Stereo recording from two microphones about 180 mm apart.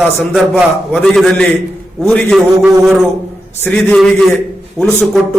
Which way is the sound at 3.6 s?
10° left (ahead or behind).